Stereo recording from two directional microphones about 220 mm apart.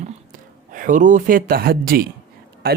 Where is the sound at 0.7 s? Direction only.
35° right (ahead or behind).